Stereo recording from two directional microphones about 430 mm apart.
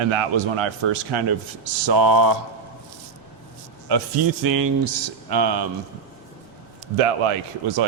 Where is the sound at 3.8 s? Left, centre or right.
Right.